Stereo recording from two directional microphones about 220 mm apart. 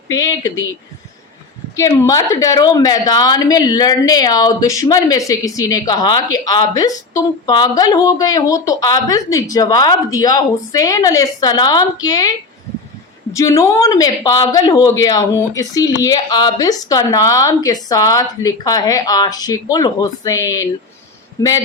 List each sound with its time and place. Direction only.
0.1 s a woman's voice: 15° left (ahead or behind)
1.7 s a woman's voice: 15° left (ahead or behind)
13.3 s a woman's voice: 15° left (ahead or behind)